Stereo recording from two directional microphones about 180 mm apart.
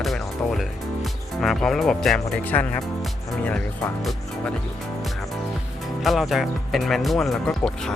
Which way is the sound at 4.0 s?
Centre (ahead or behind).